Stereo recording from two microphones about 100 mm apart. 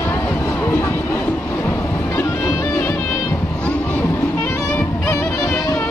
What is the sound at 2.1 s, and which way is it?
Music, 30° left (ahead or behind).